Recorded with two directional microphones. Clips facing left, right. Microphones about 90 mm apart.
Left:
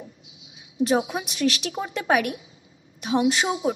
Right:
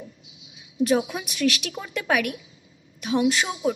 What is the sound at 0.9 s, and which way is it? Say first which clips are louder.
A woman's voice: even; 25° left (ahead or behind).